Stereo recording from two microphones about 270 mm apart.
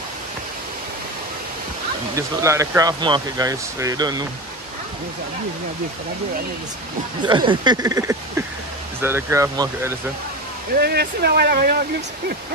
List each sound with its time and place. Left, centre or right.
2.1 s speech: centre
7.2 s speech: centre
10.8 s speech: right